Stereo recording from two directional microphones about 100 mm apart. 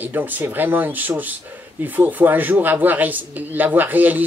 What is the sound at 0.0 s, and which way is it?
Speech, 15° right (ahead or behind).